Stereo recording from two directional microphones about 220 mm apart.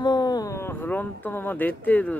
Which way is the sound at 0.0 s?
20° left (ahead or behind).